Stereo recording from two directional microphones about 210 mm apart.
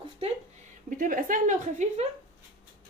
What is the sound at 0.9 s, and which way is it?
Speech, 40° right (ahead or behind).